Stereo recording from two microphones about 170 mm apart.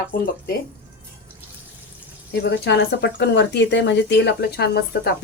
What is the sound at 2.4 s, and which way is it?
Speech, 75° left (ahead or behind).